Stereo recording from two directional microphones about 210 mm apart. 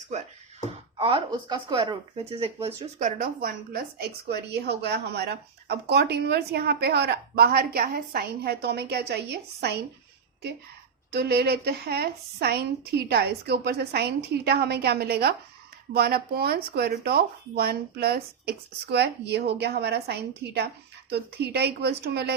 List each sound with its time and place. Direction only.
0.9 s speech: 25° right (ahead or behind); by 9.7 s 50° right (ahead or behind)
11.1 s speech: 50° right (ahead or behind)